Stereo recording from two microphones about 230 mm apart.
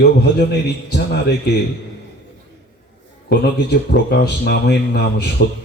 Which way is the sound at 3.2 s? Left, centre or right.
Left.